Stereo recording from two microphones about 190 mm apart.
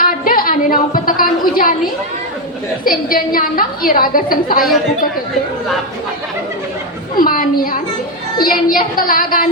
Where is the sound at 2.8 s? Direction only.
50° left (ahead or behind).